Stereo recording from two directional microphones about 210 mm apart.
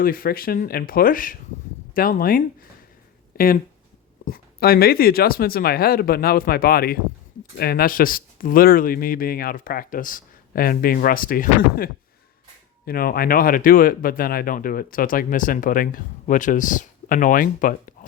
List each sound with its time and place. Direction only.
0.0 s speech: 45° left (ahead or behind)